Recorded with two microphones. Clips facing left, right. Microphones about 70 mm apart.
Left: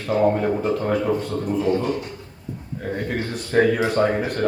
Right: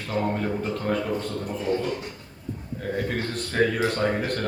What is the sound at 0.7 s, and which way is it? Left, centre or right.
Speech, centre.